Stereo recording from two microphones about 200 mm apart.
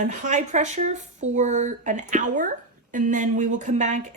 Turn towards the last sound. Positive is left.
turn(degrees=-35)  # may be behind; listen again after turning